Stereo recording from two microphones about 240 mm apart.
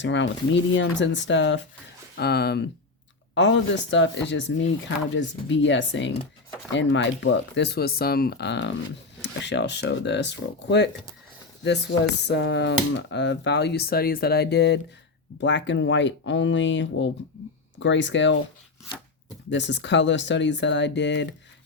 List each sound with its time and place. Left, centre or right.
0.0 s speech: left
19.5 s speech: left